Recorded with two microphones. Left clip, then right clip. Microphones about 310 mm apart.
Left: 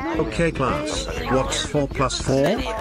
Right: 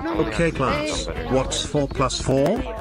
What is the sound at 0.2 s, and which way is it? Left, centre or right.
Speech, centre.